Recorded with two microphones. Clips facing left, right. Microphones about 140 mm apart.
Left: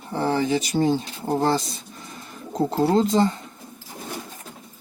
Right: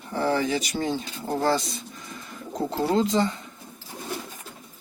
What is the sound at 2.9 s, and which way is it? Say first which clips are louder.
Speech: left 2 dB; 35° left (ahead or behind).